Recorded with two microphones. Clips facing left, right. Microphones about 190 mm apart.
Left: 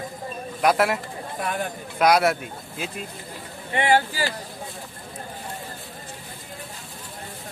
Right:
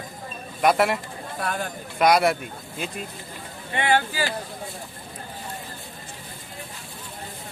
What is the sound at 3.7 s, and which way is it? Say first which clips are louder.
Speech: left 2 dB; 35° left (ahead or behind).